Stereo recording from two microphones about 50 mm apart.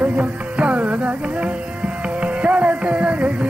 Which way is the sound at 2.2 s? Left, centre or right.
Right.